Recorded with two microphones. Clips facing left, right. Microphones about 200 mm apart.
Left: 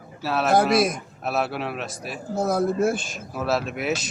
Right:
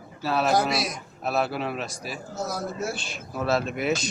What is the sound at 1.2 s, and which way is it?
Speech, centre (ahead or behind).